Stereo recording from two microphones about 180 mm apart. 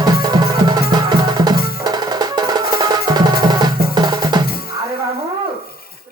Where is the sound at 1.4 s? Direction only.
20° right (ahead or behind).